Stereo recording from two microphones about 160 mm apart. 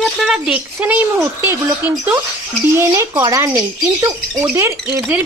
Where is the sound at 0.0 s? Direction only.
Centre (ahead or behind).